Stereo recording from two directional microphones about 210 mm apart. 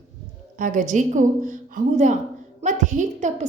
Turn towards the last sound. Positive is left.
turn(degrees=-35)  # may be behind; listen again after turning